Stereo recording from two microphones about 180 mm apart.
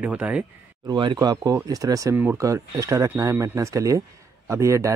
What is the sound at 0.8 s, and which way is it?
Speech, 25° right (ahead or behind).